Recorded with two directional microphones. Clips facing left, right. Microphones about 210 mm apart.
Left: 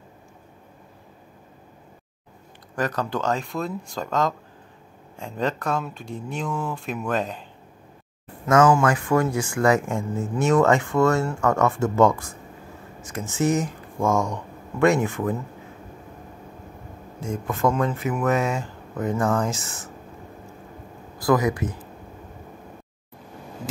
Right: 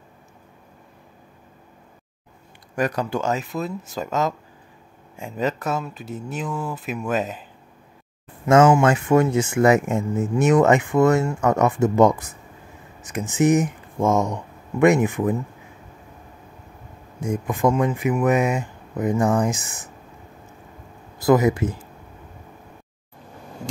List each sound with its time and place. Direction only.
2.7 s speech: 10° right (ahead or behind)
8.5 s speech: 25° right (ahead or behind)
17.2 s speech: 15° right (ahead or behind)
21.2 s speech: 25° right (ahead or behind)